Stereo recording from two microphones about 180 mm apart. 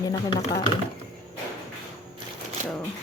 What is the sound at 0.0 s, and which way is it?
Speech, 25° left (ahead or behind).